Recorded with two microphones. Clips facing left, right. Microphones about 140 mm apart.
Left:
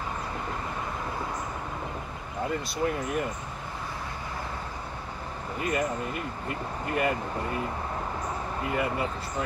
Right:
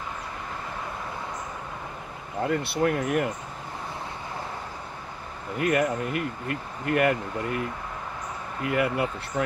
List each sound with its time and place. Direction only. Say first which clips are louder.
2.5 s speech: right 5 dB; 65° right (ahead or behind)
5.6 s speech: right 5 dB; 65° right (ahead or behind)
8.6 s speech: right 5 dB; 65° right (ahead or behind)